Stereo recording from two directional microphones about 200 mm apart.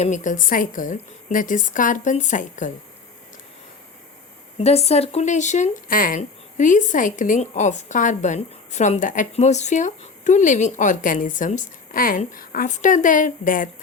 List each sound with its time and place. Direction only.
0.0 s speech: 40° left (ahead or behind)
4.5 s speech: 30° left (ahead or behind)